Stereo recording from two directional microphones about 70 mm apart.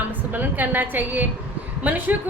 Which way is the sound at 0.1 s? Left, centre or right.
Right.